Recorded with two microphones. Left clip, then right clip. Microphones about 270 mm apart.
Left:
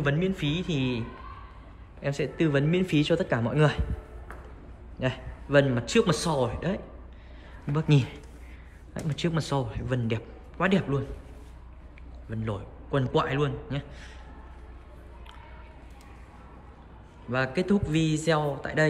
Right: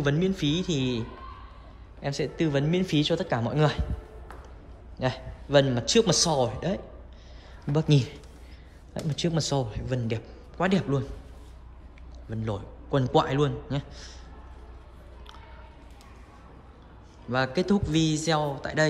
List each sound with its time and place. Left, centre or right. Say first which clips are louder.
0.0 s a man's voice: right 1 dB; centre
5.0 s a man's voice: right 1 dB; centre
12.3 s a man's voice: right 1 dB; centre
17.3 s a man's voice: right 1 dB; centre